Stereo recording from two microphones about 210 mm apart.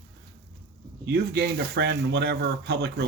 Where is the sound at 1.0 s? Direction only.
50° right (ahead or behind).